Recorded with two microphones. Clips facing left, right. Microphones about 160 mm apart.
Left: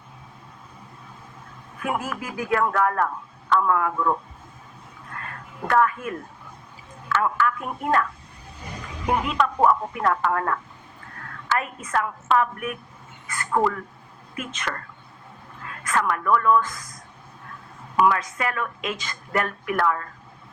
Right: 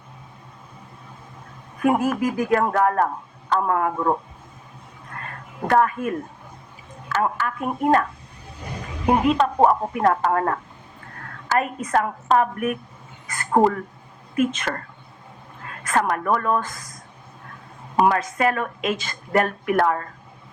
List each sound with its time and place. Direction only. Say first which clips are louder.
1.8 s speech: right 9 dB; 45° right (ahead or behind)
5.6 s speech: right 2 dB; 35° right (ahead or behind)
9.0 s speech: right 5 dB; 30° right (ahead or behind)
13.2 s a sound: right 4 dB; 40° right (ahead or behind)
14.7 s speech: right 4 dB; 35° right (ahead or behind)
15.9 s speech: right 1 dB; 40° right (ahead or behind)
17.9 s speech: right 2 dB; 35° right (ahead or behind)
18.9 s speech: right 5 dB; 30° right (ahead or behind)